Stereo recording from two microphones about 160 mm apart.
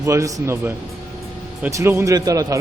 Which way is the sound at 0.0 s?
20° right (ahead or behind).